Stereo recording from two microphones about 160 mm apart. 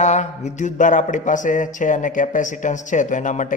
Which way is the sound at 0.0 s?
45° left (ahead or behind).